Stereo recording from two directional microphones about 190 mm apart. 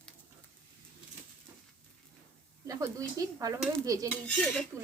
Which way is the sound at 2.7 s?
15° right (ahead or behind).